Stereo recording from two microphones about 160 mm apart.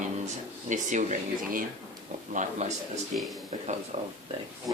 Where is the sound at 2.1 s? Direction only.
60° right (ahead or behind).